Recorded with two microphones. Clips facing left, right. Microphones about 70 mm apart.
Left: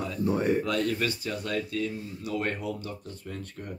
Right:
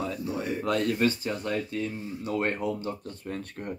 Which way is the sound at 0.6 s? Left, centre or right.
Right.